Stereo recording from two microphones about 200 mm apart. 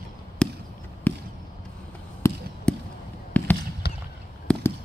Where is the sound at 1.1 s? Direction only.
10° left (ahead or behind).